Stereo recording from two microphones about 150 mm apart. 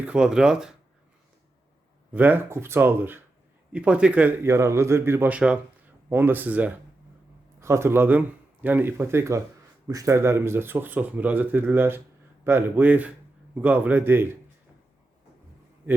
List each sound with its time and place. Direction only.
0.0 s speech: 5° right (ahead or behind)
2.1 s speech: 10° right (ahead or behind)